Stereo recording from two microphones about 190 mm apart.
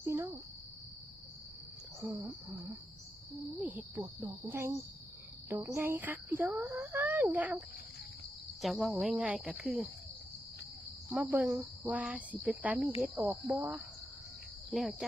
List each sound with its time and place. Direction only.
0.0 s cricket: 15° right (ahead or behind)
2.0 s speech: 15° right (ahead or behind)
3.6 s speech: 10° right (ahead or behind)
8.6 s speech: centre (ahead or behind)
11.1 s speech: 5° right (ahead or behind)